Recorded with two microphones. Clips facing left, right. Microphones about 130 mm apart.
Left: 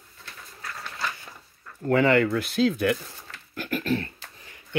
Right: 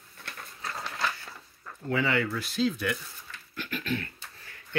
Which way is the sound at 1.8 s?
50° left (ahead or behind).